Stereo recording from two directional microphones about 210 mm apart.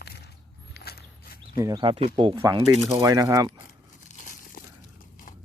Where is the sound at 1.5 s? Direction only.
20° right (ahead or behind).